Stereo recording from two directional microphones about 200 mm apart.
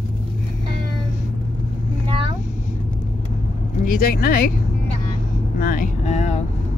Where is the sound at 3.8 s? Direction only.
45° left (ahead or behind).